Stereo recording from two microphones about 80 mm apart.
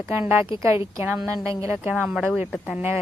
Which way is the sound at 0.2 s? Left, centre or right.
Right.